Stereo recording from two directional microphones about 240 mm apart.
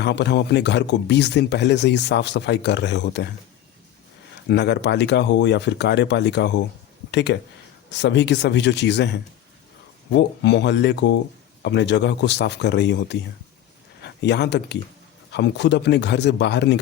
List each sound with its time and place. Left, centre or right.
0.0 s speech: left
4.4 s speech: left